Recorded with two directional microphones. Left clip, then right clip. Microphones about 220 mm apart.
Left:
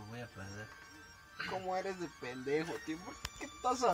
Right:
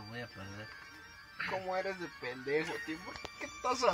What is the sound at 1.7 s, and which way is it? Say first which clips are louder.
Speech: right 2 dB; 50° left (ahead or behind).